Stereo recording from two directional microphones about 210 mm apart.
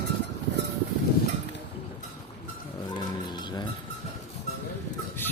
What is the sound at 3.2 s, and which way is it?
Music, 20° left (ahead or behind).